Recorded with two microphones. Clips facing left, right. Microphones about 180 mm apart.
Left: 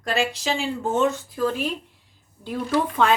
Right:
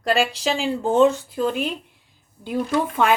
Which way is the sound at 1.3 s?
20° right (ahead or behind).